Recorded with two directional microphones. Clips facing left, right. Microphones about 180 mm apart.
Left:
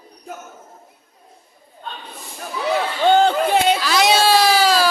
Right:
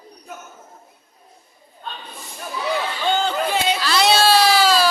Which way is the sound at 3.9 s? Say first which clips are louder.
Right 1 dB; 15° left (ahead or behind).